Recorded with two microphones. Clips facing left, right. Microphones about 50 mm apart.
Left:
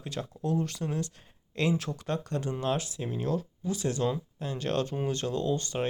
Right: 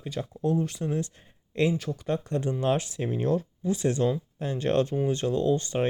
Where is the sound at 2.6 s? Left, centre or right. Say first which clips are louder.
Right 5 dB; right.